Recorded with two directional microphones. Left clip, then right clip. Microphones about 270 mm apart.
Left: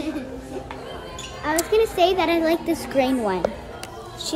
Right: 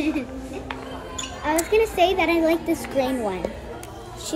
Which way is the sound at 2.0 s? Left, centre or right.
Left.